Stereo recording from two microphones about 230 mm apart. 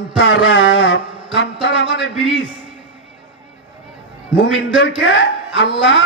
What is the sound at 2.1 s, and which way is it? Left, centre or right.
Speech, right.